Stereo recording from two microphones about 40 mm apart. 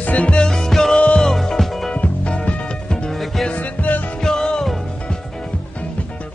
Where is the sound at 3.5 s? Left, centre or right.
Left.